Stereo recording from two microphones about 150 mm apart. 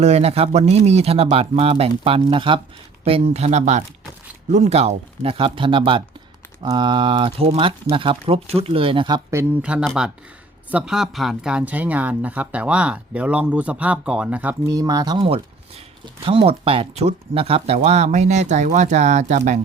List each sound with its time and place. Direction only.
0.0 s speech: 45° right (ahead or behind)
9.6 s speech: 10° right (ahead or behind)
14.7 s speech: 25° right (ahead or behind); by 19.5 s 50° right (ahead or behind)